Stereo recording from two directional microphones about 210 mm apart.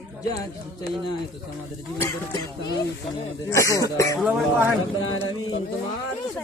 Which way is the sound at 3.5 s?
15° left (ahead or behind).